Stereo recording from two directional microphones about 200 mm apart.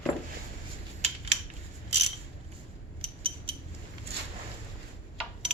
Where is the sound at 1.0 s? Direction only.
30° right (ahead or behind).